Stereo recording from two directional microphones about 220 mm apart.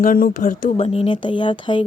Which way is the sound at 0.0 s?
40° left (ahead or behind).